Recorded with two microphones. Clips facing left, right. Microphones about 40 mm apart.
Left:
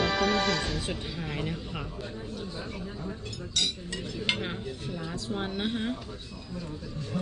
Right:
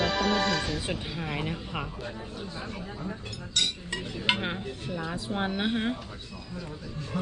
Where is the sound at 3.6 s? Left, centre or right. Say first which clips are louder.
Right 1 dB; centre.